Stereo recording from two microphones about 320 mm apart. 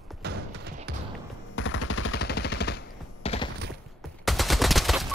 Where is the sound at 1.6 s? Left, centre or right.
Left.